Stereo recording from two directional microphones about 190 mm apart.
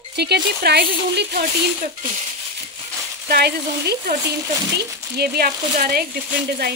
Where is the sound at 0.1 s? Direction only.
60° right (ahead or behind).